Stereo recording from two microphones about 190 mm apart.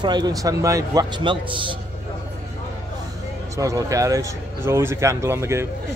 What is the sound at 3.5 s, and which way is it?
Speech, 15° right (ahead or behind).